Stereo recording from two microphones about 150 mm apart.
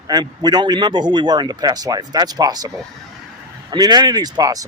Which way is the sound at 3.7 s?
25° right (ahead or behind).